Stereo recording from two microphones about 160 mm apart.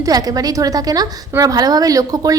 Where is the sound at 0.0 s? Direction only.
25° right (ahead or behind).